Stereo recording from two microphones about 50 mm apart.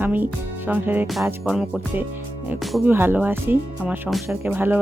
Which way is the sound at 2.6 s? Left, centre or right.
Centre.